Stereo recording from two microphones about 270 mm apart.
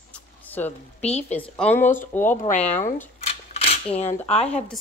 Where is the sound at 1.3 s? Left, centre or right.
Centre.